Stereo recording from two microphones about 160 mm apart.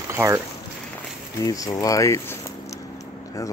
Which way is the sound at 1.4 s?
20° left (ahead or behind).